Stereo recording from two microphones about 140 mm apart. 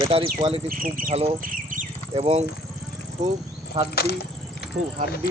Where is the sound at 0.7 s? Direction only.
85° right.